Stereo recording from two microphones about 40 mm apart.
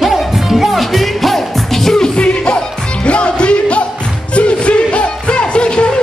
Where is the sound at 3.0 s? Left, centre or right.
Left.